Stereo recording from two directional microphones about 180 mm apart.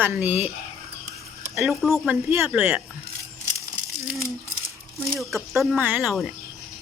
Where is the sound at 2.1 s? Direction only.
10° right (ahead or behind).